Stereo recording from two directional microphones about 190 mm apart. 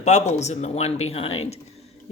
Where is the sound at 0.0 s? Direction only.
35° left (ahead or behind).